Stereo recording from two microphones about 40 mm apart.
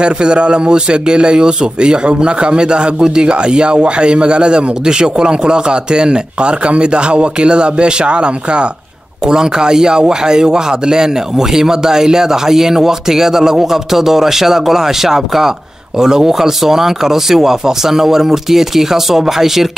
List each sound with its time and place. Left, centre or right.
0.0 s a man's voice: right; by 19.7 s centre